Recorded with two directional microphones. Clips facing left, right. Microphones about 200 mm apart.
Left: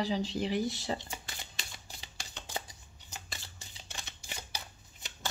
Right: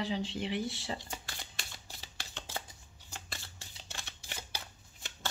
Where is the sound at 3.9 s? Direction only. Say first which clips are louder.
Left 1 dB; 15° left (ahead or behind).